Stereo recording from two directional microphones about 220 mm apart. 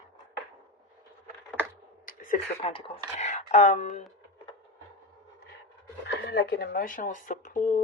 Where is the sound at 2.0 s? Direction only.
40° left (ahead or behind).